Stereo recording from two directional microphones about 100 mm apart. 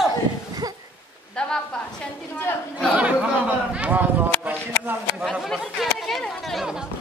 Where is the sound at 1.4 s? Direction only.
10° left (ahead or behind).